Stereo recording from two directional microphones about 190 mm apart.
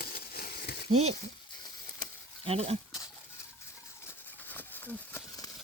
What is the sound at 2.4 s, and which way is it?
Speech, 30° right (ahead or behind).